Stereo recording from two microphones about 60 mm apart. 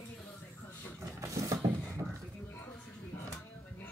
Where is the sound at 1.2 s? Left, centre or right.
Right.